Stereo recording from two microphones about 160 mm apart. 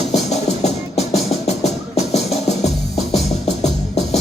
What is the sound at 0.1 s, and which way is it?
Music, 45° left (ahead or behind).